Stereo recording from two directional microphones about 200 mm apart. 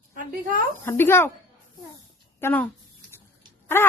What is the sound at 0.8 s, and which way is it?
Speech, 10° left (ahead or behind).